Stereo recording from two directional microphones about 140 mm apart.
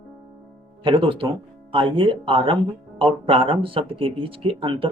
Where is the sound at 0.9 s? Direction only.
40° right (ahead or behind).